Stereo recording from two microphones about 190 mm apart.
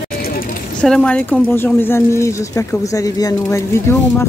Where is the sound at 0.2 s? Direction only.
50° left (ahead or behind).